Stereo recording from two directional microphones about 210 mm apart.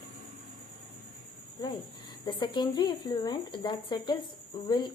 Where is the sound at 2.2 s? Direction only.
20° left (ahead or behind).